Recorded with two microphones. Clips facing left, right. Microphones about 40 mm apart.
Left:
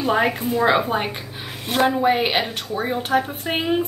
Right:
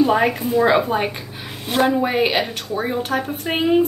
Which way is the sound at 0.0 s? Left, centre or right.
Centre.